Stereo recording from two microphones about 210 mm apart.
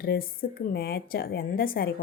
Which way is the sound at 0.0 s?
45° left (ahead or behind).